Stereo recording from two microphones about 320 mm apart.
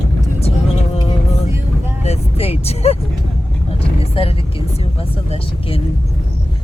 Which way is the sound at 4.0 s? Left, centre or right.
Centre.